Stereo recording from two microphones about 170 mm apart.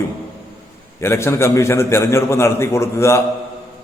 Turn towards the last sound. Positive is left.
turn(degrees=15)  # may be behind; listen again after turning